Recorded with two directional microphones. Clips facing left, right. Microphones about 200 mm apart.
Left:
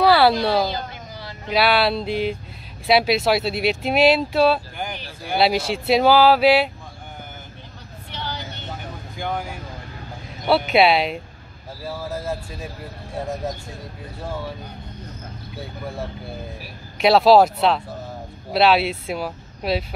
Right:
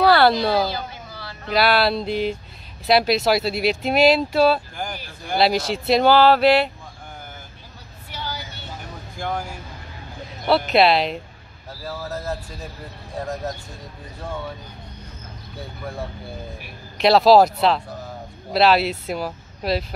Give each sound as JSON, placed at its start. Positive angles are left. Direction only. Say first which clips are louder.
{"t": 0.0, "sound": "a sound", "louder": "even", "side_deg": 5}
{"t": 0.7, "sound": "a sound", "louder": "left 1 dB", "side_deg": 15}
{"t": 1.5, "sound": "speech", "louder": "even", "side_deg": 0}
{"t": 8.1, "sound": "vehicle", "louder": "left 1 dB", "side_deg": -10}
{"t": 9.2, "sound": "vehicle", "louder": "even", "side_deg": 0}
{"t": 10.4, "sound": "speech", "louder": "even", "side_deg": 5}
{"t": 14.2, "sound": "speech", "louder": "left 1 dB", "side_deg": 5}
{"t": 17.0, "sound": "speech", "louder": "even", "side_deg": 5}